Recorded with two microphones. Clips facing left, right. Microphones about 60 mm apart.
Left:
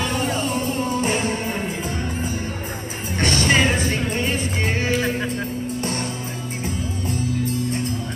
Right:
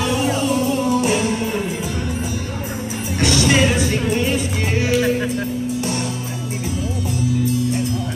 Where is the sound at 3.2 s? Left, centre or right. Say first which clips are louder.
Right 2 dB; left.